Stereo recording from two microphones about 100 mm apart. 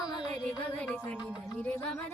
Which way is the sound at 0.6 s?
15° left (ahead or behind).